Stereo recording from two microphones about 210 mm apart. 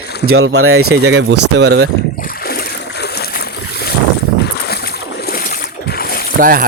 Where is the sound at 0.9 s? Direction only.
55° right (ahead or behind).